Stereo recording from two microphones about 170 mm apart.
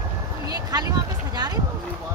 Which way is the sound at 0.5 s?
20° right (ahead or behind).